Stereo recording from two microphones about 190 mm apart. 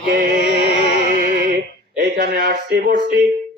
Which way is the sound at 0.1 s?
50° right (ahead or behind).